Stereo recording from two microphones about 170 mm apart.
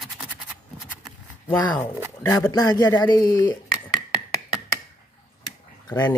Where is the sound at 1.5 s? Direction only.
10° left (ahead or behind).